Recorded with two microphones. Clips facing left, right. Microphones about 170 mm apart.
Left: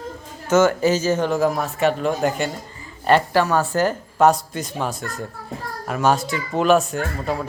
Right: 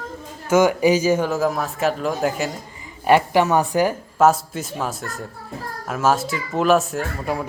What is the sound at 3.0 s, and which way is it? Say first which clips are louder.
Speech: right 1 dB; 15° right (ahead or behind).